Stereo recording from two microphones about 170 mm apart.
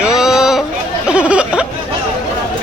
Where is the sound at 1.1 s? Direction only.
5° right (ahead or behind).